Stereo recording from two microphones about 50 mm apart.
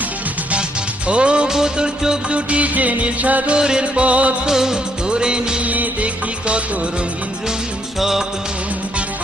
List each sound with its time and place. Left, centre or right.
1.0 s music: right
2.3 s music: right
4.4 s music of bollywood: centre
5.6 s music: right
7.9 s music: centre